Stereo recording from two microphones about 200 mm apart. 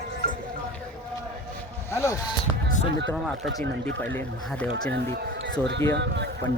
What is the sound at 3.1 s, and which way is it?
Speech, centre (ahead or behind).